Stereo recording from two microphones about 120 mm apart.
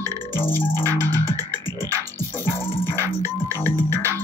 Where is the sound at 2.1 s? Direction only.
20° left (ahead or behind).